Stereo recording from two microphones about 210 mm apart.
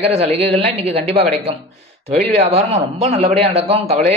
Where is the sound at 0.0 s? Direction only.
30° right (ahead or behind).